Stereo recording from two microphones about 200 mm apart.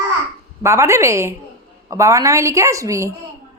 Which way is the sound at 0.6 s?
15° right (ahead or behind).